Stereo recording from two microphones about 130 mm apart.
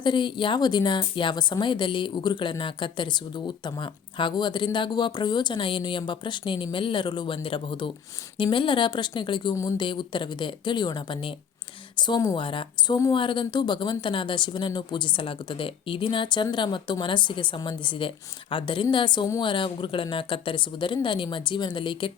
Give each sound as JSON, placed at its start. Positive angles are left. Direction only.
{"t": 0.0, "sound": "a woman's voice", "side_deg": 35}